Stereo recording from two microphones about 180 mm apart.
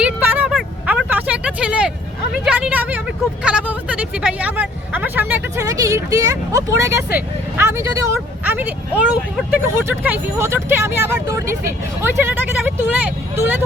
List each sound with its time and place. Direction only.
0.0 s vehicle: 5° right (ahead or behind)
2.4 s a sound: 10° right (ahead or behind)
3.4 s speech: 5° right (ahead or behind)